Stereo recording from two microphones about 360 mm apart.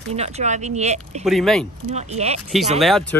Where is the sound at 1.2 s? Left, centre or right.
Centre.